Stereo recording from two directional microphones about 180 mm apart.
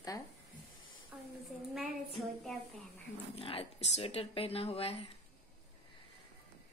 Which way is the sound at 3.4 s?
30° left (ahead or behind).